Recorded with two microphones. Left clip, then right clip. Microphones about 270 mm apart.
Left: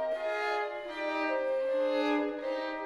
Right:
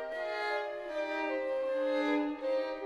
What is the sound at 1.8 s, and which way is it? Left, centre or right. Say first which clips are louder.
Music: left 2 dB; left.